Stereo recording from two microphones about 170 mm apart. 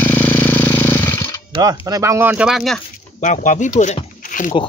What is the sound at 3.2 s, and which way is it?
Speech, 45° left (ahead or behind).